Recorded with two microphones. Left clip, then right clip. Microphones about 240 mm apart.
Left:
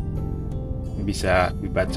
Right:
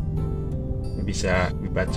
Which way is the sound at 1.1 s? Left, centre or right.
Left.